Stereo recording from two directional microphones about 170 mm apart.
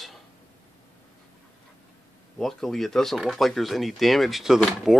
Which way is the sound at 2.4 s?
Centre (ahead or behind).